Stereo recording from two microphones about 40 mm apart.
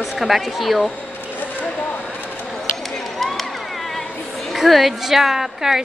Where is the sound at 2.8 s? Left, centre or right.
Centre.